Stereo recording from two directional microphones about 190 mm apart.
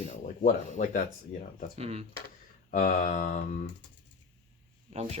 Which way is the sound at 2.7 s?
45° left (ahead or behind).